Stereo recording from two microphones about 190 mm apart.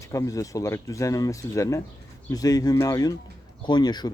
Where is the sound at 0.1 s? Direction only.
15° left (ahead or behind).